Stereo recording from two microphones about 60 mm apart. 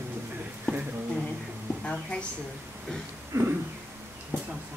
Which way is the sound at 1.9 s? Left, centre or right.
Centre.